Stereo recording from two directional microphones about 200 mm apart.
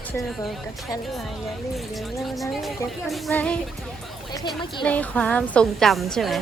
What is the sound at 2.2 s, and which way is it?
A woman's voice, centre (ahead or behind).